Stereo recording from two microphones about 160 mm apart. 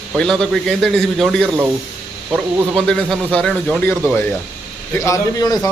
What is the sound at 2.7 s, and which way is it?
A man's voice, 5° left (ahead or behind).